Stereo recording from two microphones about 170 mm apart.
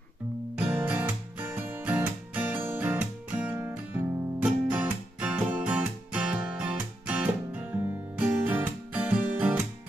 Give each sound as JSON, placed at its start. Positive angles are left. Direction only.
{"t": 0.6, "sound": "music", "side_deg": -10}